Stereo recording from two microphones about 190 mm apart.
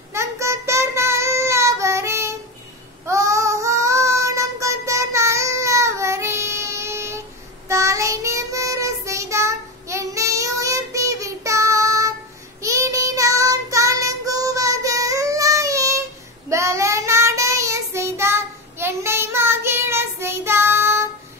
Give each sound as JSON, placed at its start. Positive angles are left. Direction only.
{"t": 0.1, "sound": "child singing", "side_deg": -15}